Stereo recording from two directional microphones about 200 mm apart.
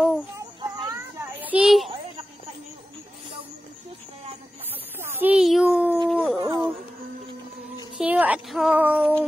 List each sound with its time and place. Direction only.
0.4 s children playing: 20° right (ahead or behind)
1.4 s a sound: 5° right (ahead or behind)
5.0 s a sound: 10° right (ahead or behind)
6.0 s howl: 5° right (ahead or behind)
6.4 s music: 20° right (ahead or behind)
8.0 s speech: 5° right (ahead or behind)